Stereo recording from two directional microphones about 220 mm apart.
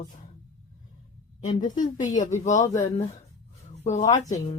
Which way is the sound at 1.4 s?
35° left (ahead or behind).